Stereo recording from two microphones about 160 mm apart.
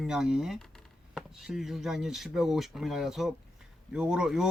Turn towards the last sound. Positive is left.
turn(degrees=-5)  # may be behind; listen again after turning